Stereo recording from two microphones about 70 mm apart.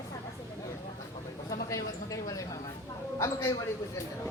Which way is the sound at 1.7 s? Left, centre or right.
Left.